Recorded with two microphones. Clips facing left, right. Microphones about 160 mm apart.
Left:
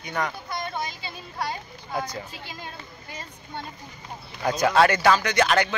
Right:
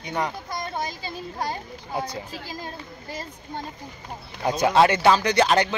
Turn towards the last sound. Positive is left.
turn(degrees=-30)  # may be behind; listen again after turning